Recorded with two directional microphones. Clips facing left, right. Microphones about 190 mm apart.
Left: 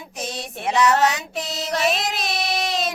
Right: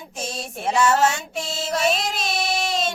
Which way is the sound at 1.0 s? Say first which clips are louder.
Even; 30° right (ahead or behind).